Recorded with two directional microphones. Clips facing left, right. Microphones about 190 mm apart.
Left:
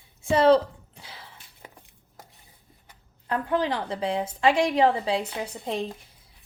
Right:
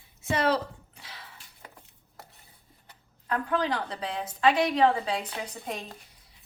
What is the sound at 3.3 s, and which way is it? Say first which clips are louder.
A woman's voice: left 2 dB; 25° left (ahead or behind).